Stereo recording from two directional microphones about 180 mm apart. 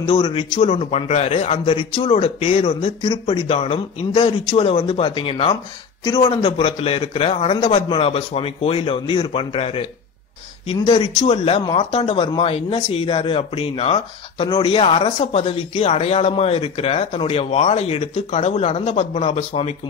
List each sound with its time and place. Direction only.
0.0 s speech: 30° left (ahead or behind)